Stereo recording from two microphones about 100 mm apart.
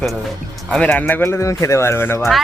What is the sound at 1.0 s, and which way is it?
Speech, 25° left (ahead or behind).